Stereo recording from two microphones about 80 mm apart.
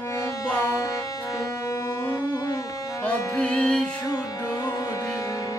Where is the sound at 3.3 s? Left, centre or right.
Centre.